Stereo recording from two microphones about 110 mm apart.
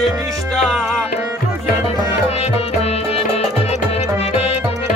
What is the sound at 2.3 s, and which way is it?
Music, 70° left (ahead or behind).